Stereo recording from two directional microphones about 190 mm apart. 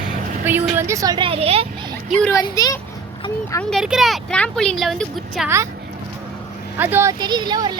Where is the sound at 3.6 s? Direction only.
Centre (ahead or behind).